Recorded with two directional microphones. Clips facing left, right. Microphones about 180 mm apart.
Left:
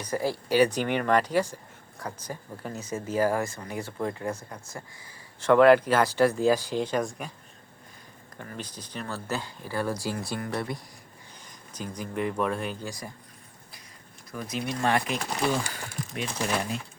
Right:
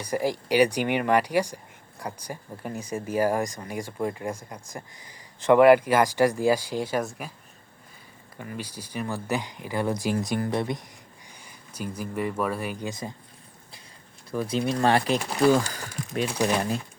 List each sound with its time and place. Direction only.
0.0 s speech: 15° right (ahead or behind)
8.4 s speech: 10° right (ahead or behind)
11.4 s speech: 10° right (ahead or behind)
12.8 s speech: 20° right (ahead or behind)
14.3 s speech: 30° right (ahead or behind)
15.7 s a sound: 35° right (ahead or behind)